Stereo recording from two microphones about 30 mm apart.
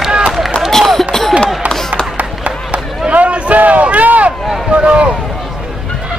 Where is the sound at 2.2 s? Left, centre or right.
Right.